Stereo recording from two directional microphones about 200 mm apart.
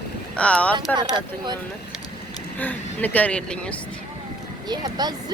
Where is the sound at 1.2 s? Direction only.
20° right (ahead or behind).